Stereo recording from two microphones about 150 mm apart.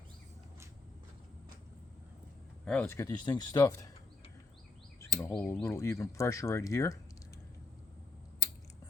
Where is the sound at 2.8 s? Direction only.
20° left (ahead or behind).